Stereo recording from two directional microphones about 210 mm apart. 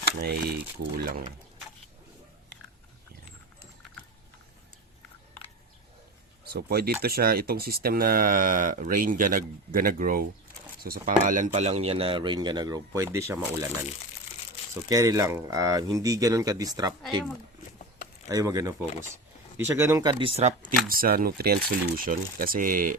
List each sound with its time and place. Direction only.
0.2 s speech: 50° right (ahead or behind)
6.4 s speech: 50° right (ahead or behind); by 13.7 s 15° right (ahead or behind)
14.8 s speech: 15° right (ahead or behind)
18.3 s speech: 15° right (ahead or behind); by 23.0 s 40° right (ahead or behind)